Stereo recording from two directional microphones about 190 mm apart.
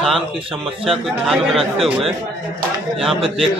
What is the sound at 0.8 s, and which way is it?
Speech, centre (ahead or behind).